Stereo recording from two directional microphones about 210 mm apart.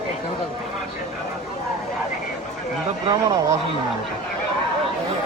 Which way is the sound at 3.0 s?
20° right (ahead or behind).